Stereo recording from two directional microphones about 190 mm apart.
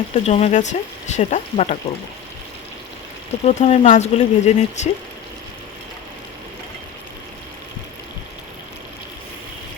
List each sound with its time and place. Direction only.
0.1 s speech: 35° left (ahead or behind)
3.4 s speech: 35° left (ahead or behind)